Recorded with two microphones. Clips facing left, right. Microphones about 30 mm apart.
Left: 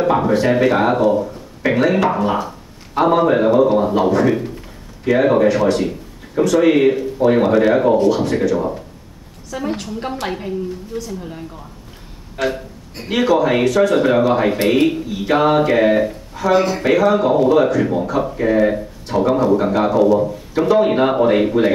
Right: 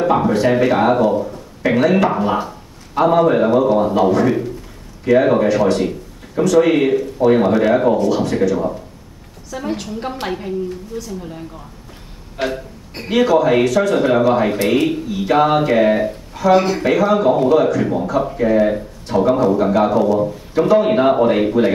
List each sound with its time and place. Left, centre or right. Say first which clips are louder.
0.0 s speech: even; centre
12.4 s music: left 1 dB; right
13.1 s speech: right 2 dB; centre